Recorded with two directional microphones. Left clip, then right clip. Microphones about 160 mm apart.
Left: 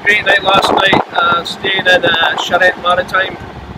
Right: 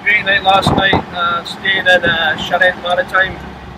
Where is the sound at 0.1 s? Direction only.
20° left (ahead or behind).